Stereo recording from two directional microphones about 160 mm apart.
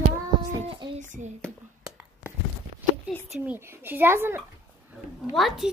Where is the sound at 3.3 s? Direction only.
10° right (ahead or behind).